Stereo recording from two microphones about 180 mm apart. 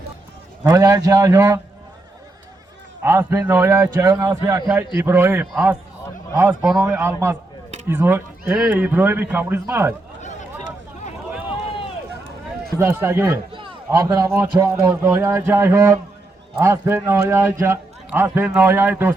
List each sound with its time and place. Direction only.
0.6 s a man's voice: 15° right (ahead or behind)
3.0 s a man's voice: 15° right (ahead or behind)
12.8 s a man's voice: 15° right (ahead or behind)
13.5 s a man's voice: 25° right (ahead or behind)